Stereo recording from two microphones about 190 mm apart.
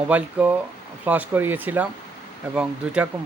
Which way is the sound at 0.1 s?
10° right (ahead or behind).